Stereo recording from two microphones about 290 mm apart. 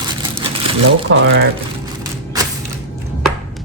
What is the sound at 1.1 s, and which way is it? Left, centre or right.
Speech, right.